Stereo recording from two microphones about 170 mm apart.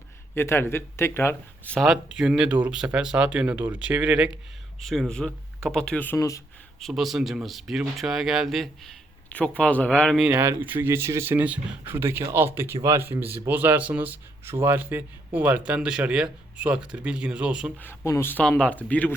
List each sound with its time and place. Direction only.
0.3 s speech: 15° left (ahead or behind)
6.1 s speech: 20° left (ahead or behind)
6.7 s speech: centre (ahead or behind)
10.3 s speech: 15° right (ahead or behind)
17.7 s speech: 15° left (ahead or behind)